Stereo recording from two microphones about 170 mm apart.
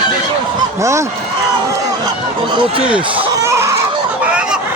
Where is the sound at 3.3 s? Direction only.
15° right (ahead or behind).